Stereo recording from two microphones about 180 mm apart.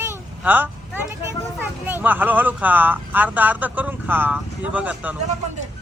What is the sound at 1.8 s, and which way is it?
Speech, 10° right (ahead or behind).